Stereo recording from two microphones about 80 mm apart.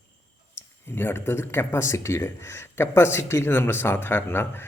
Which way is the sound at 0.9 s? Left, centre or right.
Left.